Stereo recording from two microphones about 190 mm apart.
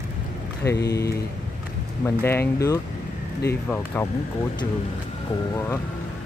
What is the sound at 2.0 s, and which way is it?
Speech, 10° left (ahead or behind).